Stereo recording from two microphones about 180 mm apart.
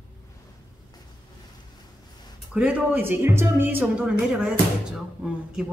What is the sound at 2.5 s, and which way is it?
Speech, 10° right (ahead or behind).